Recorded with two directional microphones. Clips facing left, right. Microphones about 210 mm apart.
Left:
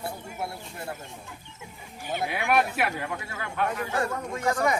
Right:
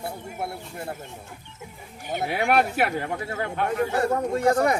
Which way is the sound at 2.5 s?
60° right (ahead or behind).